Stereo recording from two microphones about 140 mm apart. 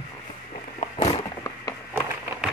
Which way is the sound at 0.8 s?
50° left (ahead or behind).